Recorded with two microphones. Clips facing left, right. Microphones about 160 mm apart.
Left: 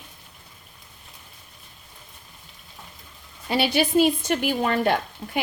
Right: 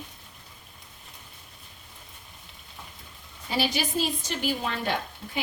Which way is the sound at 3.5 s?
65° left (ahead or behind).